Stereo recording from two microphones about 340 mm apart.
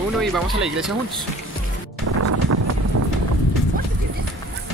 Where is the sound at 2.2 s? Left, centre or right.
Right.